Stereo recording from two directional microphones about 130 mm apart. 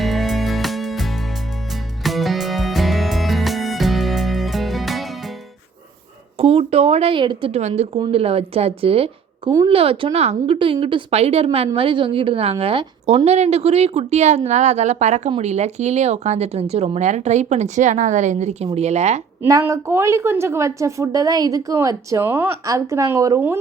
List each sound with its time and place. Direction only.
0.0 s music: centre (ahead or behind)
6.3 s a sound: 50° right (ahead or behind)
7.7 s a woman's voice: 40° right (ahead or behind); by 19.2 s 60° right (ahead or behind)
19.4 s a woman's voice: 20° right (ahead or behind)